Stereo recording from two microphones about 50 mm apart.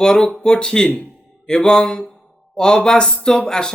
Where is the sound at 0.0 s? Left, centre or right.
Centre.